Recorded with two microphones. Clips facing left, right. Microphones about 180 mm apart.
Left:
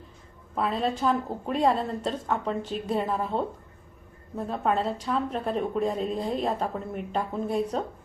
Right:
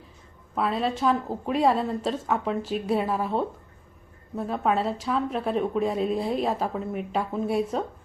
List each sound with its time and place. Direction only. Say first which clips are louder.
0.5 s a woman's voice: right 1 dB; centre (ahead or behind)